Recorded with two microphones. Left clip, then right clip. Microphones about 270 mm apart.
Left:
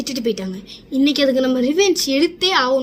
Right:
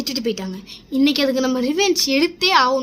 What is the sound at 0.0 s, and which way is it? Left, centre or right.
A woman's voice, centre.